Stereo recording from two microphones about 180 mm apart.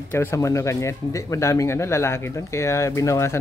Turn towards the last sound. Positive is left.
turn(degrees=15)  # may be behind; listen again after turning